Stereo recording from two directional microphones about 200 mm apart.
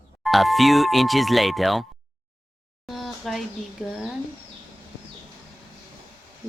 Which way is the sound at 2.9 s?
Centre (ahead or behind).